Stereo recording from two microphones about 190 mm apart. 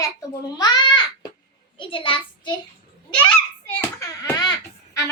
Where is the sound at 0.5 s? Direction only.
20° left (ahead or behind).